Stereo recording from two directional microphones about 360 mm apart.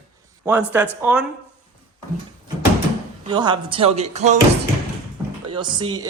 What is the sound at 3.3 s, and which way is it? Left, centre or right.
Speech, centre.